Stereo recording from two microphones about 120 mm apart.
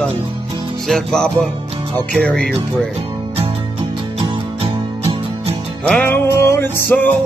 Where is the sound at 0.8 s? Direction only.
5° left (ahead or behind).